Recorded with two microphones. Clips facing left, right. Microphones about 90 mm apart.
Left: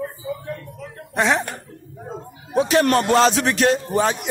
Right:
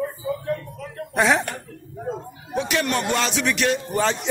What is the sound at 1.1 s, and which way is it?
Speech, centre (ahead or behind).